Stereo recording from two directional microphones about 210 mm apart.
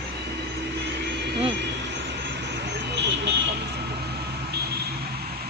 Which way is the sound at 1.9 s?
55° right (ahead or behind).